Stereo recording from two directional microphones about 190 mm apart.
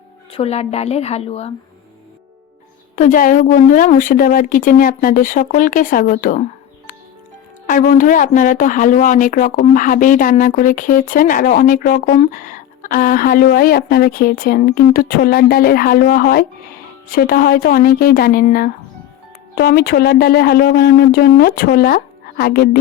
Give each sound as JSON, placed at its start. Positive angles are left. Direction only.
{"t": 0.3, "sound": "a woman's voice", "side_deg": 30}
{"t": 2.9, "sound": "speech", "side_deg": 45}